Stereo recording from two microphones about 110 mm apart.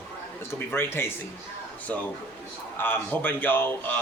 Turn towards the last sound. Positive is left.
turn(degrees=20)  # may be behind; listen again after turning